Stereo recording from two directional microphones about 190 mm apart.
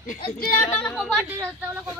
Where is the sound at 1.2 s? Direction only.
15° right (ahead or behind).